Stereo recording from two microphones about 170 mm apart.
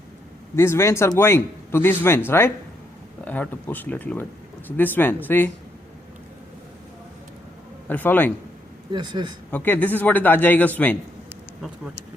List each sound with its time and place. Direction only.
0.5 s a man's voice: 15° left (ahead or behind)
7.9 s a man's voice: 10° left (ahead or behind)
8.9 s speech: 25° right (ahead or behind)
9.5 s a man's voice: 10° left (ahead or behind)